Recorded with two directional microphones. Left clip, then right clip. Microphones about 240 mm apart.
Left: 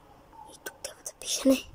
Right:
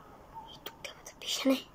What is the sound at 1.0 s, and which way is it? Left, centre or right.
Whispering, left.